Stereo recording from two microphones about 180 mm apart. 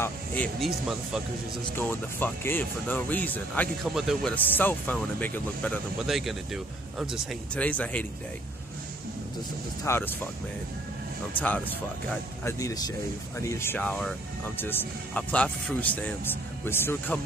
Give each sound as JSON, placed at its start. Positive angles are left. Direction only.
{"t": 0.0, "sound": "speech", "side_deg": 10}
{"t": 0.7, "sound": "speech", "side_deg": -5}
{"t": 1.8, "sound": "speech", "side_deg": 10}
{"t": 3.8, "sound": "speech", "side_deg": 0}
{"t": 4.6, "sound": "speech", "side_deg": 10}
{"t": 9.8, "sound": "speech", "side_deg": 15}
{"t": 11.4, "sound": "speech", "side_deg": 10}